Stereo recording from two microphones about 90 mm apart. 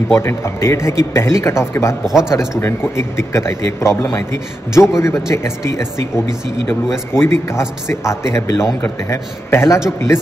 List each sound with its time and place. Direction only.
0.1 s a man's voice: 30° left (ahead or behind)